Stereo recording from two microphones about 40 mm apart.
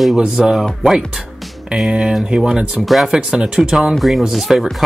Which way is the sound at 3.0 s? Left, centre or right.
Centre.